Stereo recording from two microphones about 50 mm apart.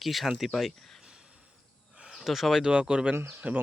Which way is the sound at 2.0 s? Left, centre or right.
Centre.